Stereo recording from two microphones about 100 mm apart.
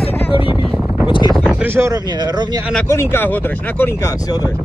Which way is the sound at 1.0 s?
55° left (ahead or behind).